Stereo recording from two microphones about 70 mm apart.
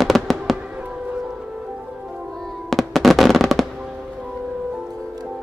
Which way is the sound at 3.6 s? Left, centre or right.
Centre.